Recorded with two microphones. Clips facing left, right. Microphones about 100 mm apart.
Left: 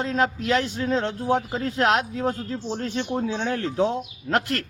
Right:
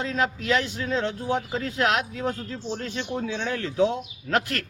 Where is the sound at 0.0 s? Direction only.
40° left (ahead or behind).